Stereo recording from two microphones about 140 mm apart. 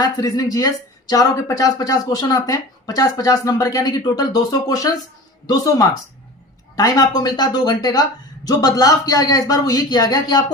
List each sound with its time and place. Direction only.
0.0 s speech: 25° left (ahead or behind)